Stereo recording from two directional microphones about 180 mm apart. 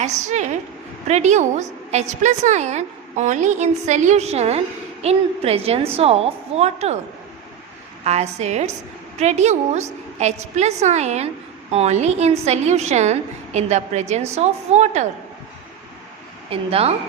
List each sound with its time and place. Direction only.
0.0 s a woman's voice: 40° right (ahead or behind)
8.0 s a woman's voice: 35° right (ahead or behind)
16.5 s a woman's voice: 35° right (ahead or behind)